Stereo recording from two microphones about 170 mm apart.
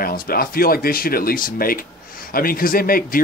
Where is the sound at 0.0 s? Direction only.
60° left (ahead or behind).